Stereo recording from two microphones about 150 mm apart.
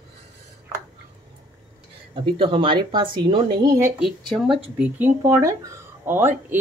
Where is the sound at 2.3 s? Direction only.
35° right (ahead or behind).